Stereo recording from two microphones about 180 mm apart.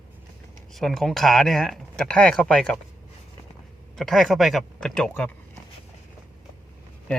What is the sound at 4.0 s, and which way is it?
Speech, centre (ahead or behind).